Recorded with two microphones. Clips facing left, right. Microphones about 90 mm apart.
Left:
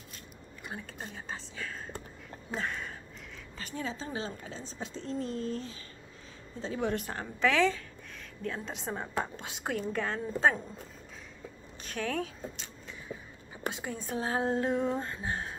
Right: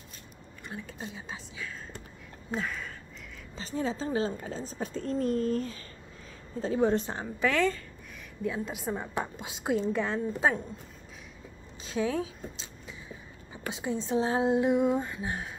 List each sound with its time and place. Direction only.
0.7 s speech: 5° right (ahead or behind)
3.5 s a woman's voice: 30° right (ahead or behind); by 5.9 s 45° right (ahead or behind)
6.6 s a woman's voice: 35° right (ahead or behind); by 7.4 s 20° right (ahead or behind)
7.4 s speech: centre (ahead or behind); by 10.5 s 15° right (ahead or behind)
11.8 s speech: 15° right (ahead or behind)